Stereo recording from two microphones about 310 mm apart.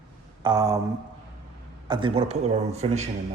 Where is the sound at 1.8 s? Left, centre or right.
Centre.